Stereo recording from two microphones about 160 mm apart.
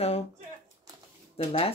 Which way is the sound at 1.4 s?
40° left (ahead or behind).